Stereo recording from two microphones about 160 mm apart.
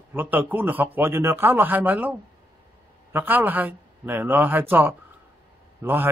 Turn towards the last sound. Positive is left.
turn(degrees=-10)  # may be behind; listen again after turning